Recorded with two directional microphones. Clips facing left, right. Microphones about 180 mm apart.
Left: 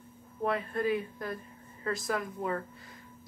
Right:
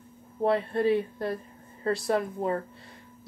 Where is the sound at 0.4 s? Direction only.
30° right (ahead or behind).